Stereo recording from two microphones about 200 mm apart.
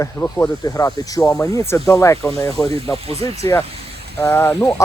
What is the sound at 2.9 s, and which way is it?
Speech, 30° right (ahead or behind).